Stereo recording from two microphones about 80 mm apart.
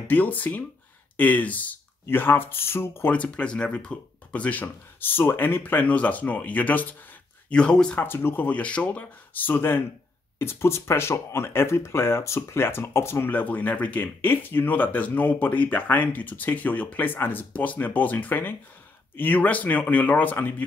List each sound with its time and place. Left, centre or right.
0.1 s speech: left
3.1 s speech: centre
8.0 s speech: left